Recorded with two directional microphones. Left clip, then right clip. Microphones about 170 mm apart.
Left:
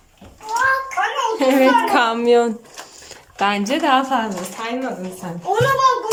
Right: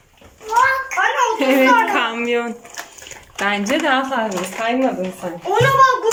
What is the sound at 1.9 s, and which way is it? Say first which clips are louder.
A child's voice: left 4 dB; 20° left (ahead or behind).